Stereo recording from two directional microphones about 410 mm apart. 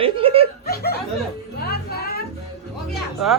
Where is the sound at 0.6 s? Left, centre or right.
Left.